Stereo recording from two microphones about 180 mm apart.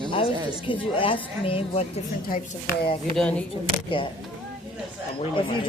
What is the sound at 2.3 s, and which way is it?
Speech, 55° left (ahead or behind).